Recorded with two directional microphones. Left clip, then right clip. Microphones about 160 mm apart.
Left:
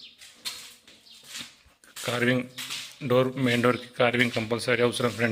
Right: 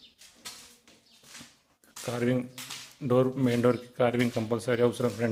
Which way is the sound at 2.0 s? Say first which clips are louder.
Left 4 dB; 5° right (ahead or behind).